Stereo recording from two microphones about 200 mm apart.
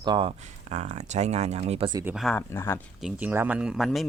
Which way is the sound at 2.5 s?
15° left (ahead or behind).